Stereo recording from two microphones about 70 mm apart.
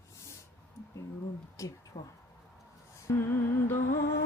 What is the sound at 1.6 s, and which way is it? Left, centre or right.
Speech, left.